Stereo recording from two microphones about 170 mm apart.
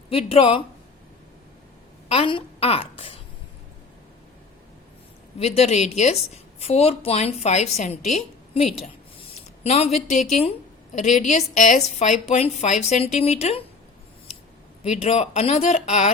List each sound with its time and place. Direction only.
0.1 s a woman's voice: 35° left (ahead or behind)
2.0 s a woman's voice: 35° left (ahead or behind)
5.4 s a woman's voice: 40° left (ahead or behind)
9.6 s a woman's voice: 40° left (ahead or behind)
14.8 s a woman's voice: 40° left (ahead or behind)